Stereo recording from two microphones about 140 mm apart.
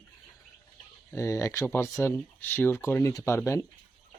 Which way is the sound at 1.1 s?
20° left (ahead or behind).